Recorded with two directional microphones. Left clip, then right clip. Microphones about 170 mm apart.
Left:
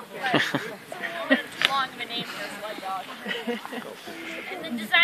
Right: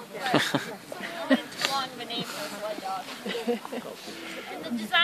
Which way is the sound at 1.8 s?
10° left (ahead or behind).